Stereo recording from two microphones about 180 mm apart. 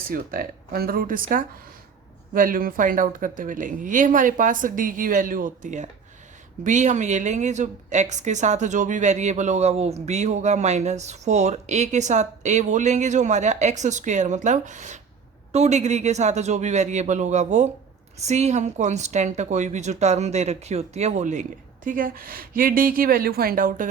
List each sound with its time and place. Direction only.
0.1 s a woman's voice: 50° right (ahead or behind)